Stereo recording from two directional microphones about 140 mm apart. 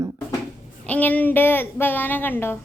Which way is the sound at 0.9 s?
10° left (ahead or behind).